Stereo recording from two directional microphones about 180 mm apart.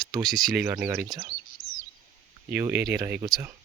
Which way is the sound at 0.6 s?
10° right (ahead or behind).